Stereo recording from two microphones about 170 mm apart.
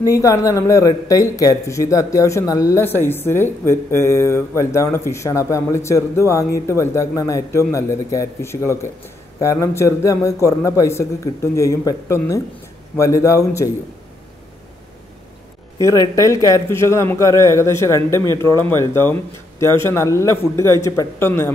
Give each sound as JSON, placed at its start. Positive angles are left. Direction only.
{"t": 0.0, "sound": "speech", "side_deg": 20}
{"t": 15.8, "sound": "speech", "side_deg": 20}